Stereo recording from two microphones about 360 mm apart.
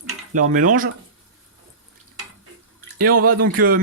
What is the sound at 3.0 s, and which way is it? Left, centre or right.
Speech, right.